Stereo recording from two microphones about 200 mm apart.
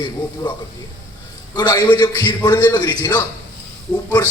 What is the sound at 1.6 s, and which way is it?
A man's voice, 20° left (ahead or behind).